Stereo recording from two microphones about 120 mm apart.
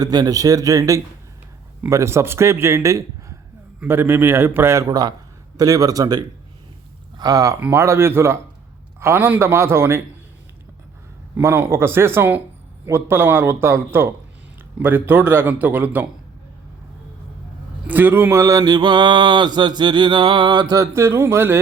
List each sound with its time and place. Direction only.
0.0 s mantra: 35° right (ahead or behind)
1.9 s a man's voice: 25° right (ahead or behind)
5.5 s mantra: 30° right (ahead or behind)
7.2 s a man's voice: 30° right (ahead or behind)
11.3 s a man's voice: 20° right (ahead or behind)
17.8 s mantra: 15° right (ahead or behind)